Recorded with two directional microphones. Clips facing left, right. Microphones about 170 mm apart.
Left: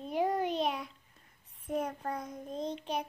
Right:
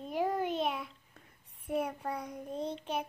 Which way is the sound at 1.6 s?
10° right (ahead or behind).